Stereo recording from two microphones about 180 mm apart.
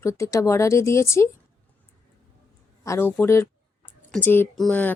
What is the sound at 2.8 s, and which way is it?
A woman's voice, 15° left (ahead or behind).